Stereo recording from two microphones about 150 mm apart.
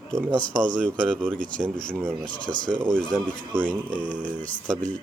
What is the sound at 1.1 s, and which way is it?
Speech, 10° right (ahead or behind).